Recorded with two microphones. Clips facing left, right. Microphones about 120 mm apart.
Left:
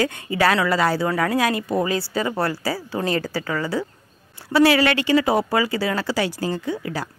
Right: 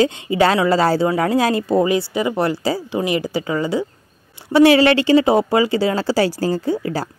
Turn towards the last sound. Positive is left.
turn(degrees=-35)  # may be behind; listen again after turning